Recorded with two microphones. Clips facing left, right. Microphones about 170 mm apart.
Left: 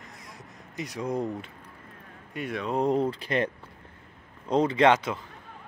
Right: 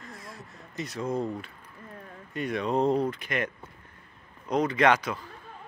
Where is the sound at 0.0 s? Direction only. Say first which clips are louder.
Right 3 dB; 20° left (ahead or behind).